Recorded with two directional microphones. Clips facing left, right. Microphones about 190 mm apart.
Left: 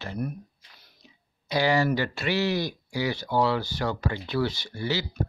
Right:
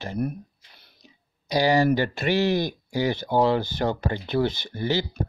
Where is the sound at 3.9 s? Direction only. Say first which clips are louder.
Right 3 dB; 50° right (ahead or behind).